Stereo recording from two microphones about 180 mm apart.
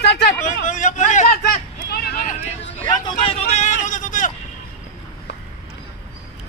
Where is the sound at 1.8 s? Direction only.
60° left (ahead or behind).